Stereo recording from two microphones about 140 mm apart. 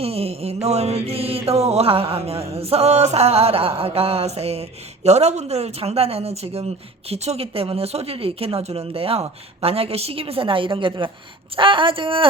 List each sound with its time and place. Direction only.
0.0 s mantra: 45° right (ahead or behind)
11.5 s speech: 35° right (ahead or behind)